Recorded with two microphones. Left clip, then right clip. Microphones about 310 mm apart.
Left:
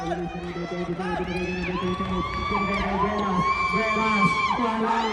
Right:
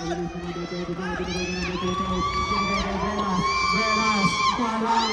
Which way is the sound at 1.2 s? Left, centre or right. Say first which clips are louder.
Even; left.